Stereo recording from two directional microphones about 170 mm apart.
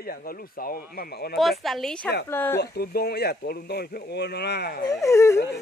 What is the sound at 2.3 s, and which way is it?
Dog, 15° left (ahead or behind).